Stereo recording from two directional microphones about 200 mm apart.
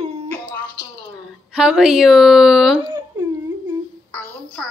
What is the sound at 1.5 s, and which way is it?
A woman's voice, 5° right (ahead or behind).